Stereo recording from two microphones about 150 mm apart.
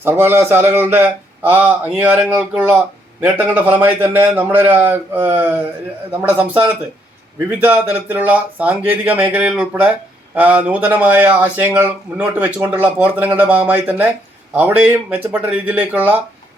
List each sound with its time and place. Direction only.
0.0 s speech: 15° right (ahead or behind)
7.6 s speech: 10° right (ahead or behind)